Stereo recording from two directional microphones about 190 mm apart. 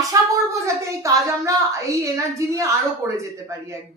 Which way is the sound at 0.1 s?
15° right (ahead or behind).